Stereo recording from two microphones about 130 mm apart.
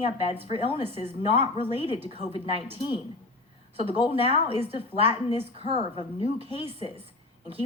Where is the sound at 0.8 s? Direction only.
50° right (ahead or behind).